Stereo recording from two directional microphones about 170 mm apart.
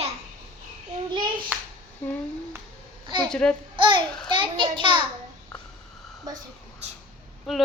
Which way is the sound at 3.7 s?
30° right (ahead or behind).